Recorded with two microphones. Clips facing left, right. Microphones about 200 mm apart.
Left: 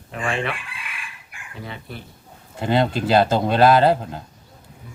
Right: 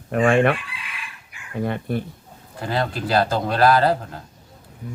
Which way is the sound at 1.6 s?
50° right (ahead or behind).